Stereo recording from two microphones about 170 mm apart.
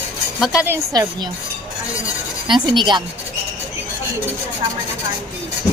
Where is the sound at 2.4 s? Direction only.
25° right (ahead or behind).